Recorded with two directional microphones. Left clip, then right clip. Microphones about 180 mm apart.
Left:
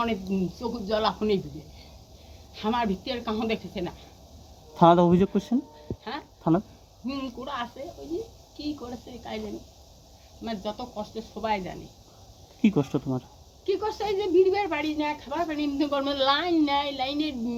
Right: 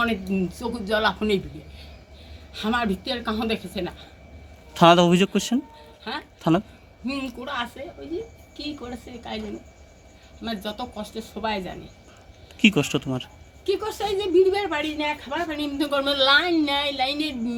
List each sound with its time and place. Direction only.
0.0 s a woman's voice: centre (ahead or behind)
2.5 s a woman's voice: centre (ahead or behind)
4.8 s a man's voice: 15° right (ahead or behind)
6.4 s a woman's voice: 20° right (ahead or behind)
7.0 s a woman's voice: 5° right (ahead or behind)
10.4 s a woman's voice: centre (ahead or behind)
12.9 s speech: 30° right (ahead or behind)
13.7 s a woman's voice: 5° right (ahead or behind)